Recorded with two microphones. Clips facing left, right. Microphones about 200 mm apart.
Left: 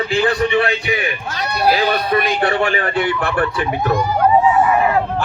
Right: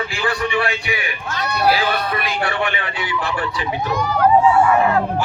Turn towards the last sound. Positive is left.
turn(degrees=20)  # may be behind; listen again after turning